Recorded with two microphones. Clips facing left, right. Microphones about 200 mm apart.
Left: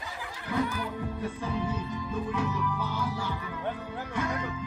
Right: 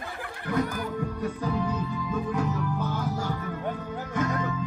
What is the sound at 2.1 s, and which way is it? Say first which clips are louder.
Music: right 2 dB; 45° right (ahead or behind).